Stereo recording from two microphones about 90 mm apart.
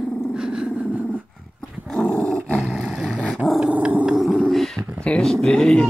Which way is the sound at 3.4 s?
5° right (ahead or behind).